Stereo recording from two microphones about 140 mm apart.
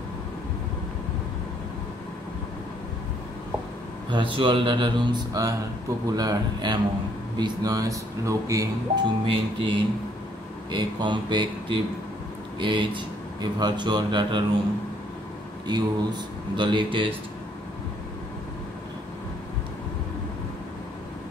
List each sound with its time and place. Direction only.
4.1 s speech: 35° right (ahead or behind)
9.2 s speech: 35° right (ahead or behind)
15.6 s speech: 30° right (ahead or behind)